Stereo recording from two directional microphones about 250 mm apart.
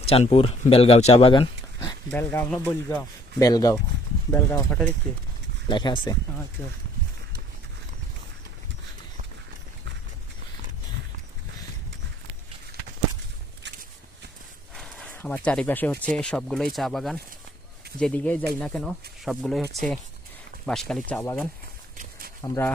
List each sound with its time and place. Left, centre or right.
0.0 s speech: left; by 4.9 s centre
5.6 s speech: centre
14.8 s a sound: centre
15.4 s speech: centre
22.4 s speech: centre